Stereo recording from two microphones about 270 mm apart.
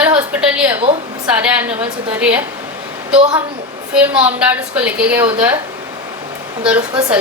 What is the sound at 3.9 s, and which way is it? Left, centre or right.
A woman's voice, centre.